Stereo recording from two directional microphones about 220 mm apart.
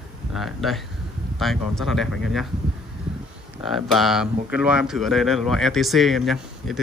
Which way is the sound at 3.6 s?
Centre (ahead or behind).